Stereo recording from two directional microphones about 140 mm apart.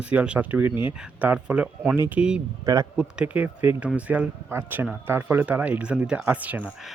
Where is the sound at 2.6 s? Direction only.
25° right (ahead or behind).